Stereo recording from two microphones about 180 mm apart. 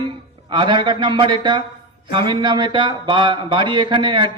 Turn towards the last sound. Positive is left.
turn(degrees=-25)  # may be behind; listen again after turning